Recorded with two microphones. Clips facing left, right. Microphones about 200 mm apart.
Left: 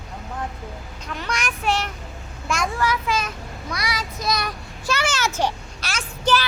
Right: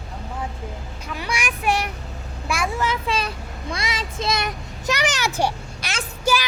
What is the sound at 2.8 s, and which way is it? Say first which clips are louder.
A child's voice: left 1 dB; 25° right (ahead or behind).